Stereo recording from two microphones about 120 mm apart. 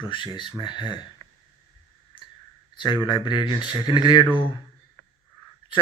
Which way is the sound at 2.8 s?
40° left (ahead or behind).